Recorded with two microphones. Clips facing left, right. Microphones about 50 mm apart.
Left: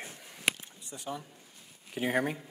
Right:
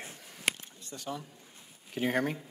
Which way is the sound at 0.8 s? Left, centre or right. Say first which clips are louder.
Even; centre.